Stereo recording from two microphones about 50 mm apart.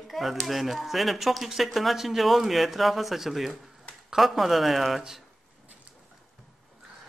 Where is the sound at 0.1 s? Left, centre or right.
Centre.